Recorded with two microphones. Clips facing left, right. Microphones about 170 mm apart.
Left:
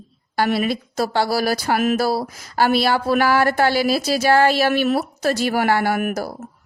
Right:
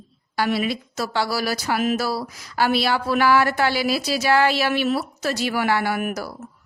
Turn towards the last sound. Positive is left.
turn(degrees=50)  # may be behind; listen again after turning